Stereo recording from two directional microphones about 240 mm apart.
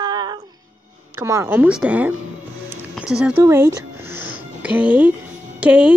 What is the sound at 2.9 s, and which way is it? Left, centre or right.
Music, centre.